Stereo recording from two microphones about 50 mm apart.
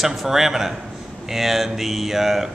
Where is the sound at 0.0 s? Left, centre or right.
Centre.